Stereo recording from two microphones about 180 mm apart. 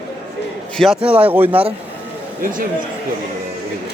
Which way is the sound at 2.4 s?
50° right (ahead or behind).